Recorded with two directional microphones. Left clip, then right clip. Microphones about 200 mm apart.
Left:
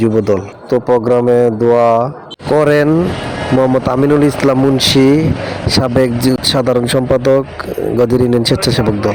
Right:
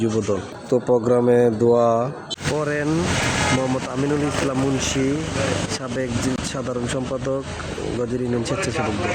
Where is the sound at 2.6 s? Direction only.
30° left (ahead or behind).